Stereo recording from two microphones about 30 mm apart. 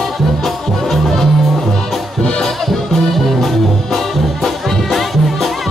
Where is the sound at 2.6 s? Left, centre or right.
Centre.